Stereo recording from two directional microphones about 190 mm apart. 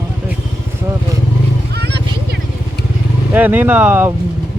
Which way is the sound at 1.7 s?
60° right (ahead or behind).